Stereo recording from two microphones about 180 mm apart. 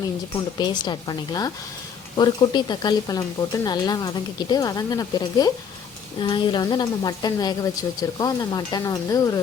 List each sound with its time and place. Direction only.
0.6 s speech: 25° left (ahead or behind)